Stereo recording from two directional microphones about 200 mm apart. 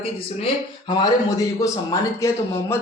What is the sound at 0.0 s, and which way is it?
Speech, 30° left (ahead or behind).